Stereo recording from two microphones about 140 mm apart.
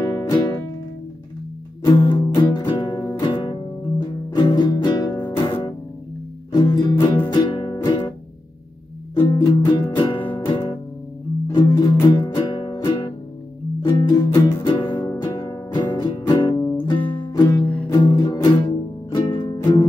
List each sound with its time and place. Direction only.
0.0 s music: 20° left (ahead or behind)
1.9 s music: 30° left (ahead or behind)
9.2 s music: 25° left (ahead or behind)